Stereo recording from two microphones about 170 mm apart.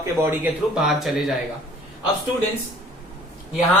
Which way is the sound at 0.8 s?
Centre (ahead or behind).